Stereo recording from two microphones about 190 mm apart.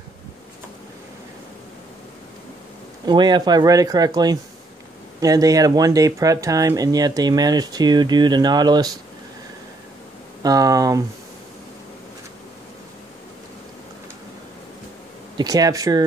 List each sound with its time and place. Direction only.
3.1 s speech: 25° right (ahead or behind)
10.4 s speech: 20° right (ahead or behind)
15.3 s speech: 20° right (ahead or behind)